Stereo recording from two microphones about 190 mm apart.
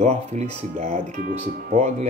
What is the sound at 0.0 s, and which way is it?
Speech, 35° right (ahead or behind).